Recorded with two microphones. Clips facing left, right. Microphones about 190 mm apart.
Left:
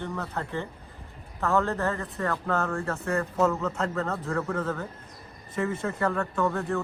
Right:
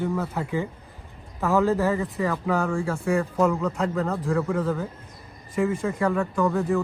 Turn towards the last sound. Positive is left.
turn(degrees=0)  # may be behind; listen again after turning